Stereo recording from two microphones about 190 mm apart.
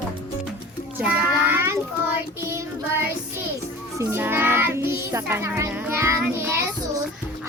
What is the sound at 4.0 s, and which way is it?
Child singing, 10° right (ahead or behind).